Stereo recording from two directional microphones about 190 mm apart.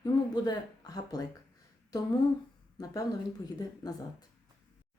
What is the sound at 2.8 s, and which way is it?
Speech, 20° left (ahead or behind).